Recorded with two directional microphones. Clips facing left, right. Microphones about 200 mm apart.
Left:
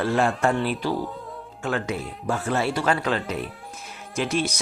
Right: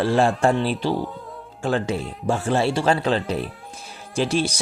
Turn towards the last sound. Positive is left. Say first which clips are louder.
# right 3 dB
turn(degrees=-30)  # may be behind; listen again after turning